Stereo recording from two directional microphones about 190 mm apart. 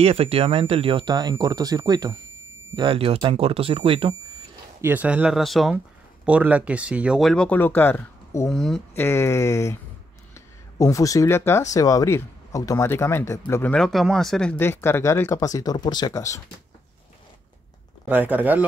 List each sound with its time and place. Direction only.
0.0 s speech: 30° right (ahead or behind)
4.8 s speech: 10° right (ahead or behind); by 8.5 s 10° left (ahead or behind)
8.5 s speech: centre (ahead or behind)
9.0 s speech: 15° left (ahead or behind)
18.0 s speech: 10° right (ahead or behind)